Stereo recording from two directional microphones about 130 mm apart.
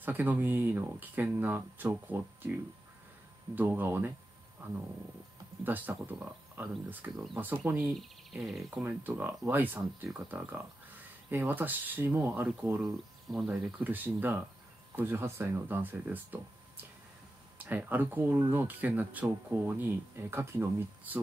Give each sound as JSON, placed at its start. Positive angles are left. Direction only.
{"t": 0.0, "sound": "speech", "side_deg": -15}
{"t": 3.5, "sound": "speech", "side_deg": -15}
{"t": 8.3, "sound": "speech", "side_deg": -5}
{"t": 8.7, "sound": "speech", "side_deg": -15}
{"t": 13.3, "sound": "speech", "side_deg": -5}